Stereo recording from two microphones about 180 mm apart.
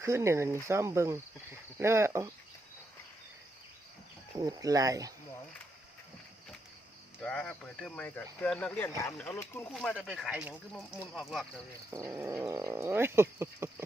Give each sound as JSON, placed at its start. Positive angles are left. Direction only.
{"t": 0.0, "sound": "speech", "side_deg": -15}
{"t": 4.4, "sound": "speech", "side_deg": -20}
{"t": 7.2, "sound": "speech", "side_deg": 5}
{"t": 9.7, "sound": "speech", "side_deg": 5}
{"t": 11.9, "sound": "speech", "side_deg": -15}